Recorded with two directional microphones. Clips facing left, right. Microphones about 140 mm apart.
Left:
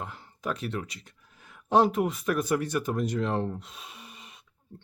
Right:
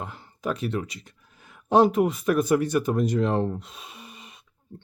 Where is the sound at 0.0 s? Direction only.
10° right (ahead or behind).